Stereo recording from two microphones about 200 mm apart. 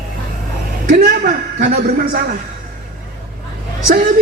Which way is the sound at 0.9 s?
50° right (ahead or behind).